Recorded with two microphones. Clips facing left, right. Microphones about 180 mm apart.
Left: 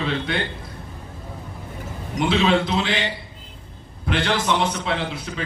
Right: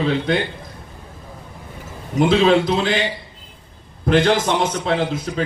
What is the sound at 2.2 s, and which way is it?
Speech, 45° right (ahead or behind).